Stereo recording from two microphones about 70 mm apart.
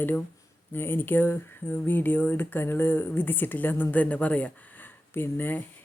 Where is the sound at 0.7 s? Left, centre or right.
Left.